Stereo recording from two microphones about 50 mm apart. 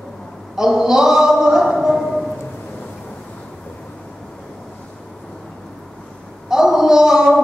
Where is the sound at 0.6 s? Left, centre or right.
Centre.